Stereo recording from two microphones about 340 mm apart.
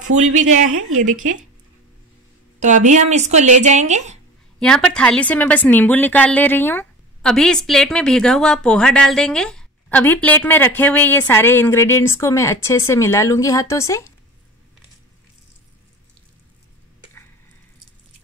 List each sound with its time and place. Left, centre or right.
0.4 s speech: right
0.7 s a woman's voice: right
2.6 s speech: right
4.6 s a woman's voice: centre